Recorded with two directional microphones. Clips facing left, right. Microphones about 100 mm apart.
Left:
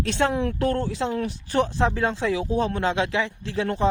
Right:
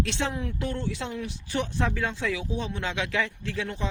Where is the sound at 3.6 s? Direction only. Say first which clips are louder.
Left 13 dB; 45° left (ahead or behind).